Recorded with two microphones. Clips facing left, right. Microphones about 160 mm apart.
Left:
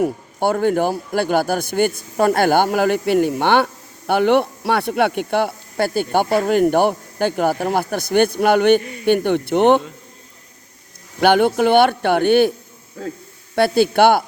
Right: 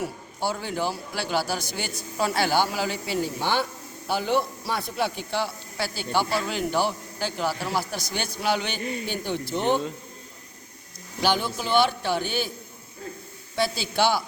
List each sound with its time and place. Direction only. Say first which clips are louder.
0.0 s a man's voice: left 10 dB; 55° left (ahead or behind)
8.8 s a man's voice: right 3 dB; 25° right (ahead or behind)
9.0 s a man's voice: left 13 dB; 60° left (ahead or behind)
11.2 s a man's voice: left 11 dB; 60° left (ahead or behind)
13.0 s a man's voice: left 9 dB; 90° left
13.6 s a man's voice: left 11 dB; 55° left (ahead or behind)